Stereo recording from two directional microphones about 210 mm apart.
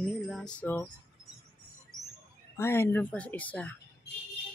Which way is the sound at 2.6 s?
10° left (ahead or behind).